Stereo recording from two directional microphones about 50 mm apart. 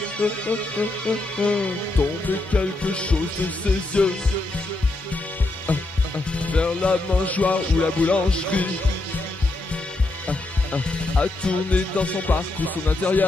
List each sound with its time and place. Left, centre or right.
0.2 s speech: left
5.7 s speech: left
10.2 s speech: left